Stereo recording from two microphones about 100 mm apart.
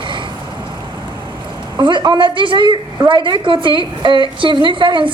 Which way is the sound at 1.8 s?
50° right (ahead or behind).